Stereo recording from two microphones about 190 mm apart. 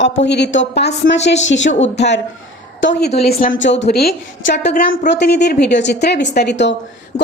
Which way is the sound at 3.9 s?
55° left (ahead or behind).